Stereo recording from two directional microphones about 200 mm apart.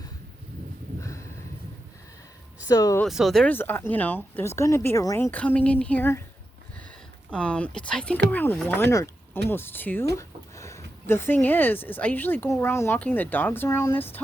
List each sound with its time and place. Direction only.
1.0 s a sound: 15° left (ahead or behind)
2.6 s speech: 15° left (ahead or behind)
3.0 s speech: centre (ahead or behind)
7.3 s speech: 5° left (ahead or behind)